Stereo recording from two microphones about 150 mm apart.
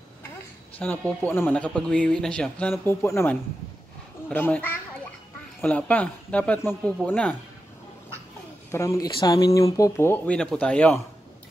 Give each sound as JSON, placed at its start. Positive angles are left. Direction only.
{"t": 0.7, "sound": "speech", "side_deg": 10}
{"t": 2.8, "sound": "speech", "side_deg": 15}
{"t": 8.7, "sound": "speech", "side_deg": 20}